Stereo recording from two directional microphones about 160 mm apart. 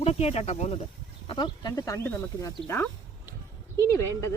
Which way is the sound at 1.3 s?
30° left (ahead or behind).